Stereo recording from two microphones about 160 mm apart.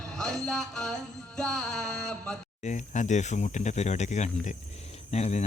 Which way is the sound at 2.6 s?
50° left (ahead or behind).